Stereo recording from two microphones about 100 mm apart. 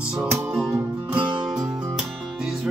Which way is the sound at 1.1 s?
55° right (ahead or behind).